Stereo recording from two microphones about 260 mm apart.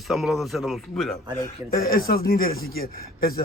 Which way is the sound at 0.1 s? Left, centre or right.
Centre.